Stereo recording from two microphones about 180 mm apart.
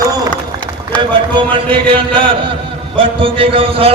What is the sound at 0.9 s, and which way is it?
Speech, 10° left (ahead or behind).